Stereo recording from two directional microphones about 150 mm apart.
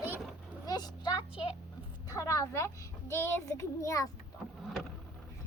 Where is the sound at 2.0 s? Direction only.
20° left (ahead or behind).